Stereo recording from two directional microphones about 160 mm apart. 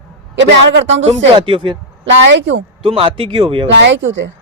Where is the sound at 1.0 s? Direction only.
35° right (ahead or behind).